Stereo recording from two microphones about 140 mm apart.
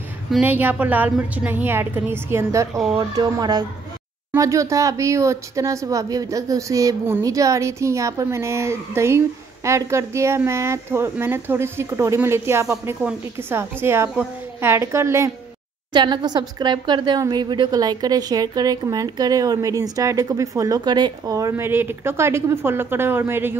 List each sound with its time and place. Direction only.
0.4 s a woman's voice: 15° right (ahead or behind)
15.9 s speech: 35° right (ahead or behind); by 23.6 s 15° right (ahead or behind)